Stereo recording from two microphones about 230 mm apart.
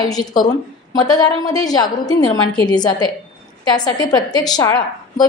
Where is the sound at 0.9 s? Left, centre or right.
Centre.